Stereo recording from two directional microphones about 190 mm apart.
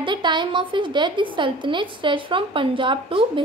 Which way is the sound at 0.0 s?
25° right (ahead or behind).